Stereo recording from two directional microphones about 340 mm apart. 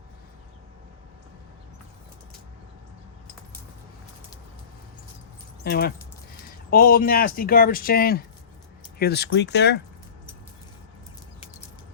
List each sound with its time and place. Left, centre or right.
5.6 s speech: left